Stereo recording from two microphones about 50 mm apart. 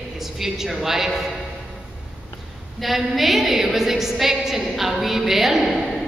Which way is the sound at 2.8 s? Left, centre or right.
Centre.